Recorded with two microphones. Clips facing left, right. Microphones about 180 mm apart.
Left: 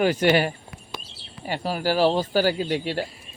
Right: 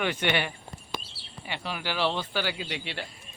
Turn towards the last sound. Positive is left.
turn(degrees=45)  # may be behind; listen again after turning